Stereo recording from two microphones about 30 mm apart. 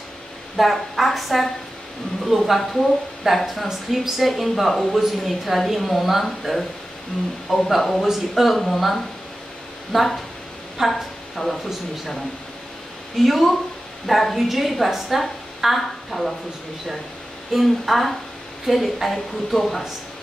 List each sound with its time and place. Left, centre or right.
0.6 s a woman's voice: centre
8.5 s speech: centre
9.9 s a woman's voice: centre
11.4 s speech: centre
13.2 s speech: centre
17.5 s speech: centre
19.1 s speech: centre